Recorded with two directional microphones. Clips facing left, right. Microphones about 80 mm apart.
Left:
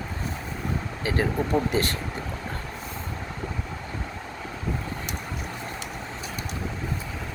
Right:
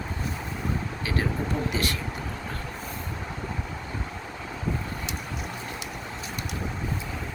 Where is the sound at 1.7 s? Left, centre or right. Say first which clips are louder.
Left 4 dB; left.